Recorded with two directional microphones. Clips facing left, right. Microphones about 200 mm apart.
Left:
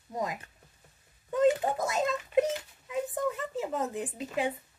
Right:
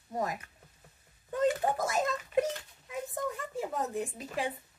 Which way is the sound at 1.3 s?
25° left (ahead or behind).